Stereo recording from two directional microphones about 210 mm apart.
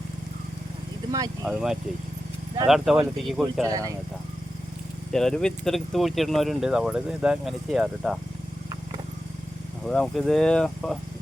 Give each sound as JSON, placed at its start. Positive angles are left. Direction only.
{"t": 1.5, "sound": "speech", "side_deg": -5}
{"t": 3.5, "sound": "speech", "side_deg": -15}
{"t": 5.1, "sound": "speech", "side_deg": 0}
{"t": 9.8, "sound": "speech", "side_deg": 5}